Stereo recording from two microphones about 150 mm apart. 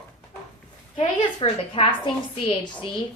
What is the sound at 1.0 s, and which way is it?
A woman's voice, 40° left (ahead or behind).